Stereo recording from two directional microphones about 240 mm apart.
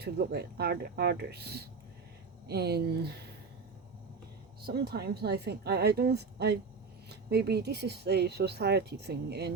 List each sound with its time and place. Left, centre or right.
0.0 s speech: right
4.6 s speech: right